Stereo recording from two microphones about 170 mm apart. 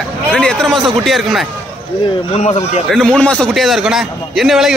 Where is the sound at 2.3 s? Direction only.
40° left (ahead or behind).